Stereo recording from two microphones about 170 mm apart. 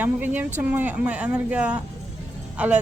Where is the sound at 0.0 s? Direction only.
10° right (ahead or behind).